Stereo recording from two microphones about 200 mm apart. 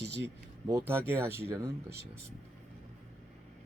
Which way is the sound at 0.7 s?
15° right (ahead or behind).